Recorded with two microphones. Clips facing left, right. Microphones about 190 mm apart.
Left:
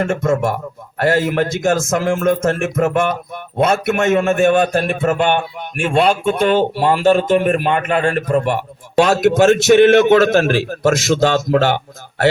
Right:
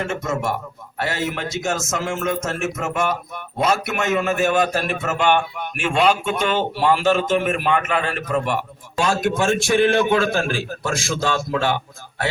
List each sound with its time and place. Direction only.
0.0 s a man's voice: 50° left (ahead or behind)
9.0 s a man's voice: 70° left (ahead or behind)